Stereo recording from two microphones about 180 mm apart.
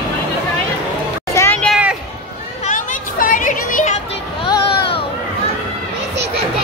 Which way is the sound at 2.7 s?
50° left (ahead or behind).